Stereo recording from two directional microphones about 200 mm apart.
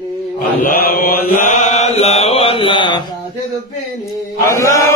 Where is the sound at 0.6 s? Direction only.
45° left (ahead or behind); by 3.0 s 25° left (ahead or behind).